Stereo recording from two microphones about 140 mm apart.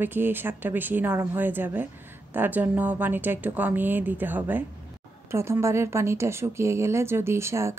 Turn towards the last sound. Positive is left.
turn(degrees=-20)  # may be behind; listen again after turning